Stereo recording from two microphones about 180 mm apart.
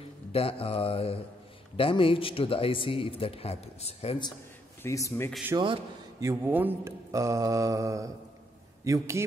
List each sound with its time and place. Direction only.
0.3 s speech: 30° left (ahead or behind)
4.8 s speech: 15° left (ahead or behind)
5.6 s speech: 20° right (ahead or behind)